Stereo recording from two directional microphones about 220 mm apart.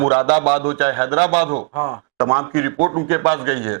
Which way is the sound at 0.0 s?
25° right (ahead or behind).